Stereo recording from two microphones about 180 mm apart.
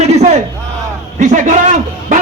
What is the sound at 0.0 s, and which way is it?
Crowd, 40° right (ahead or behind).